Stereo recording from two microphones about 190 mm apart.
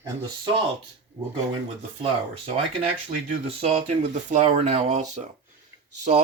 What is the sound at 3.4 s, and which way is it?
Speech, 30° right (ahead or behind).